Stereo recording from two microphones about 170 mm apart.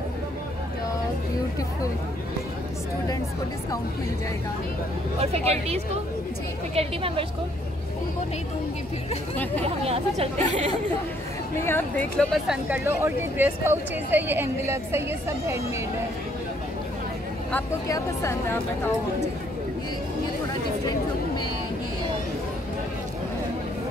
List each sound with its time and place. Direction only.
5.2 s speech: 40° right (ahead or behind)
9.8 s speech: 35° right (ahead or behind)
11.6 s speech: 15° left (ahead or behind)
12.2 s speech: centre (ahead or behind)
12.6 s speech: 10° right (ahead or behind)
17.8 s speech: 20° left (ahead or behind)